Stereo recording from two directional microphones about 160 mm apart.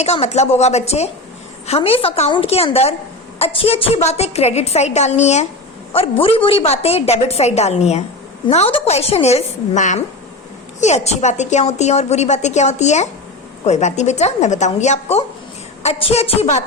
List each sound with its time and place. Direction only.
0.0 s a woman's voice: 40° left (ahead or behind)